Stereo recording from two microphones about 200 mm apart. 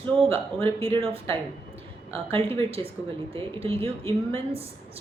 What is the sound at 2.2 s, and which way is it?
Speech, 30° right (ahead or behind).